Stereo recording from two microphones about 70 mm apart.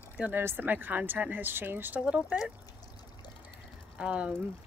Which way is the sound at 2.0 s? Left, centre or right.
Centre.